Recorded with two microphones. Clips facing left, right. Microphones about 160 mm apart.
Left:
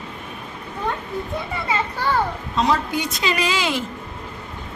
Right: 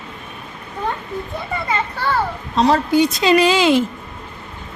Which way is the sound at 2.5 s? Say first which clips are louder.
Right 7 dB; 35° right (ahead or behind).